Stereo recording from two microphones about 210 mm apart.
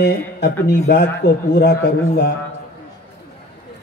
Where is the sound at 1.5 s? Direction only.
50° left (ahead or behind).